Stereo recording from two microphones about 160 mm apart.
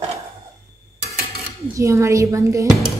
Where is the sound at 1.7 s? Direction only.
20° right (ahead or behind).